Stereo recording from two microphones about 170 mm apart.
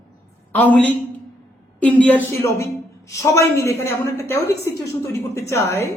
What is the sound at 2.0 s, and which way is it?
A man's voice, 10° left (ahead or behind).